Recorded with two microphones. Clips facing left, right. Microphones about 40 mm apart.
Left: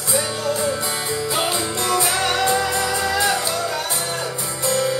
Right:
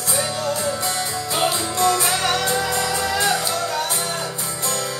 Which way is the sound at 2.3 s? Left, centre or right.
Centre.